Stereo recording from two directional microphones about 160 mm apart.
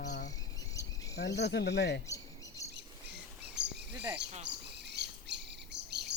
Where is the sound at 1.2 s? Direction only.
90° left.